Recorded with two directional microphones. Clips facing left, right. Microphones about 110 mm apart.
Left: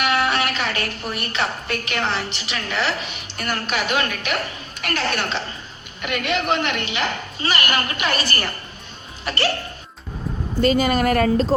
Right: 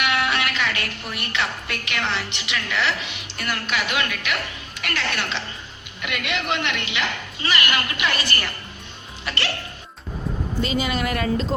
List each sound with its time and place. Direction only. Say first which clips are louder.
0.0 s a woman's voice: left 3 dB; 40° left (ahead or behind)